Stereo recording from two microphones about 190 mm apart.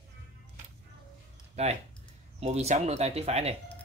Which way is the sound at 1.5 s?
35° right (ahead or behind).